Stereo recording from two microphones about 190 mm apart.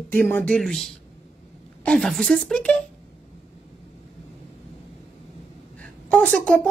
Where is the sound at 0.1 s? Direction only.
10° left (ahead or behind).